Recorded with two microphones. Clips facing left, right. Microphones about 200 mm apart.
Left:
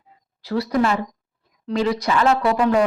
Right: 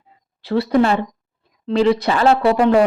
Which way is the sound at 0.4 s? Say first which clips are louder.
Right 4 dB; 30° right (ahead or behind).